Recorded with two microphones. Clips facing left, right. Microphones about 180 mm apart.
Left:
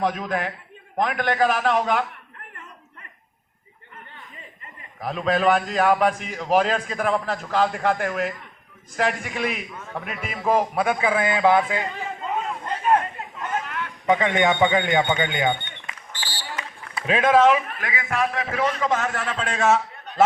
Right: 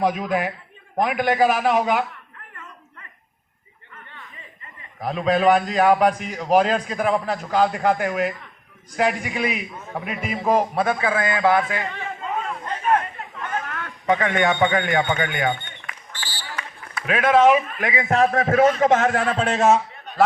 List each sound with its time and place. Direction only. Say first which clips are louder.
0.0 s a man's voice: right 3 dB; 5° right (ahead or behind)
4.9 s a man's voice: right 2 dB; centre (ahead or behind)
10.8 s a man's voice: even; 15° left (ahead or behind)
12.2 s a sound: even; 10° left (ahead or behind)
14.1 s a sound: even; 20° left (ahead or behind)
17.3 s a man's voice: right 3 dB; 15° right (ahead or behind)
18.1 s a man's voice: right 7 dB; 45° right (ahead or behind)